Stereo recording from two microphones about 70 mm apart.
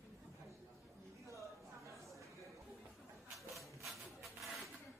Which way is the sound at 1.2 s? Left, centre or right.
Right.